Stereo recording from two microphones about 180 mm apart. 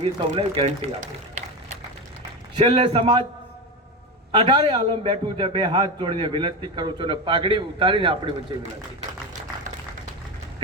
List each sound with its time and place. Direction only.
0.0 s speech: 35° right (ahead or behind)
2.6 s a man's voice: 25° right (ahead or behind)
4.3 s a man's voice: 25° right (ahead or behind)